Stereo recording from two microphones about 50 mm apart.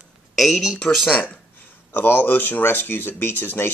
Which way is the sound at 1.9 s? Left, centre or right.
Left.